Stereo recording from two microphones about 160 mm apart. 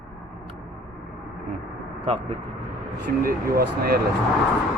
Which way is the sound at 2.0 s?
35° right (ahead or behind).